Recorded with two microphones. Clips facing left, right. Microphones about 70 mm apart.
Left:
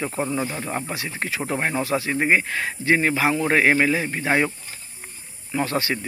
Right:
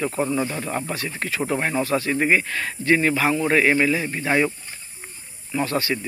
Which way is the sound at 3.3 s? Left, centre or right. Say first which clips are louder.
Even; left.